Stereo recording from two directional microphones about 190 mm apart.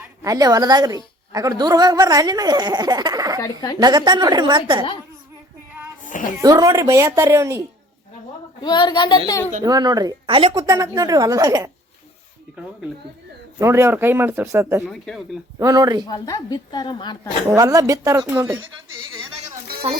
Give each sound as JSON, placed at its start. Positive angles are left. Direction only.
{"t": 0.2, "sound": "a woman's voice", "side_deg": -20}
{"t": 3.4, "sound": "a woman's voice", "side_deg": 20}
{"t": 3.8, "sound": "a woman's voice", "side_deg": -20}
{"t": 6.1, "sound": "a sound", "side_deg": 45}
{"t": 6.4, "sound": "speech", "side_deg": -20}
{"t": 8.6, "sound": "a woman's voice", "side_deg": 25}
{"t": 9.6, "sound": "a woman's voice", "side_deg": -20}
{"t": 13.6, "sound": "speech", "side_deg": -15}
{"t": 14.8, "sound": "speech", "side_deg": 0}
{"t": 15.5, "sound": "a woman's voice", "side_deg": -20}
{"t": 16.0, "sound": "a woman's voice", "side_deg": 20}
{"t": 17.5, "sound": "speech", "side_deg": -20}